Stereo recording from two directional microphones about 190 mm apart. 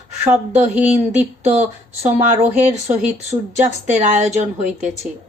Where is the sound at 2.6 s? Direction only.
10° right (ahead or behind).